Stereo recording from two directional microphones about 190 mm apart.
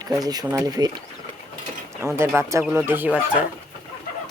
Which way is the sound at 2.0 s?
15° right (ahead or behind).